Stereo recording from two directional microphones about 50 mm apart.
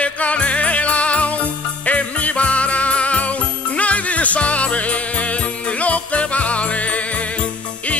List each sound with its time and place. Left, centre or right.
0.0 s jingle bell: left